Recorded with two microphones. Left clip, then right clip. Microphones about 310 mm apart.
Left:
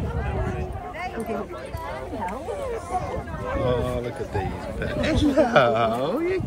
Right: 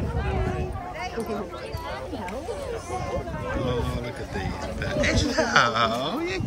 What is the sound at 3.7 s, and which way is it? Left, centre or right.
Speech, centre.